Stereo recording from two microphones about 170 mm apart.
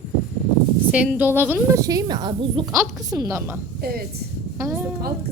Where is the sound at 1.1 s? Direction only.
10° right (ahead or behind).